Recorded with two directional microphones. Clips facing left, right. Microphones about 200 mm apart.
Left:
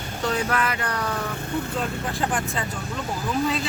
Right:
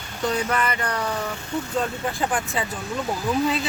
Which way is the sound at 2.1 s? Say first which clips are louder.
Right 1 dB; centre (ahead or behind).